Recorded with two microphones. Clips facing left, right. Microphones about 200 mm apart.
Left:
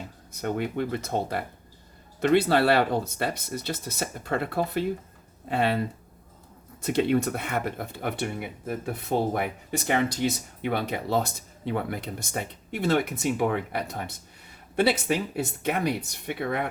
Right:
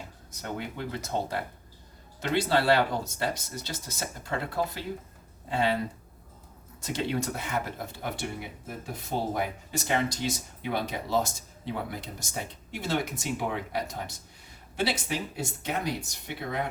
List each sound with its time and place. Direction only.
0.3 s speech: 60° left (ahead or behind)
6.8 s speech: 60° left (ahead or behind)